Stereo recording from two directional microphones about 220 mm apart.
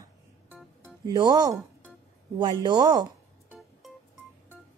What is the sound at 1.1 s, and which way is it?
Speech, 20° right (ahead or behind).